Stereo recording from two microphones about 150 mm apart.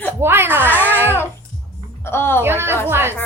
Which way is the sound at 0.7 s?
15° left (ahead or behind).